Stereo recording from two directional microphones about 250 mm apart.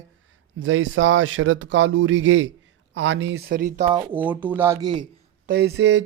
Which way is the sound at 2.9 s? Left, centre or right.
Right.